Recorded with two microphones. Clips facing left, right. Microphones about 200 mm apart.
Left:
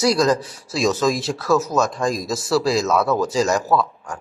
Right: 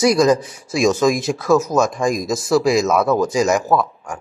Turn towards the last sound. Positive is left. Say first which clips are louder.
# right 2 dB
turn(degrees=-15)  # may be behind; listen again after turning